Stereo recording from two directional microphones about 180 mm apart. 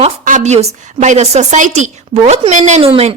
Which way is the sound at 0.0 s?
40° right (ahead or behind).